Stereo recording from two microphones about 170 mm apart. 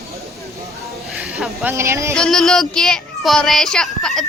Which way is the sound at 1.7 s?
15° right (ahead or behind).